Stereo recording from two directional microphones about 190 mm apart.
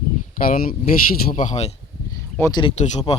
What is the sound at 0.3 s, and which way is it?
Speech, 50° left (ahead or behind).